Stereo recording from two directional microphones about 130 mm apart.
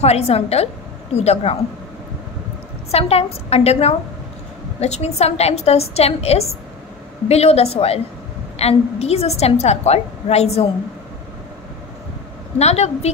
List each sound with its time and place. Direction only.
0.0 s a woman's voice: 55° left (ahead or behind)
2.9 s a woman's voice: 50° left (ahead or behind)
12.5 s a woman's voice: 55° left (ahead or behind)